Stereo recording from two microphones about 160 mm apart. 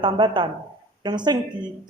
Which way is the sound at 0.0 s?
30° right (ahead or behind).